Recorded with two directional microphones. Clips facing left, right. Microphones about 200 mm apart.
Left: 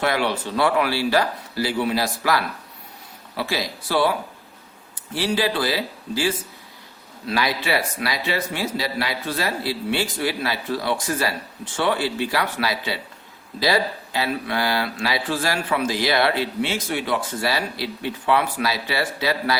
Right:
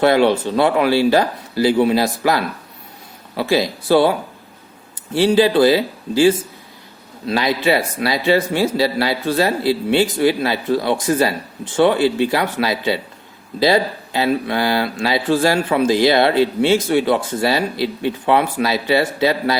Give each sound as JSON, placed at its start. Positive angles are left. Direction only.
{"t": 0.0, "sound": "speech", "side_deg": -25}
{"t": 5.1, "sound": "speech", "side_deg": -25}